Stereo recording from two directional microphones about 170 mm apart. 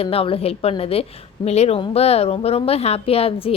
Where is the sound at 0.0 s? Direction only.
35° left (ahead or behind).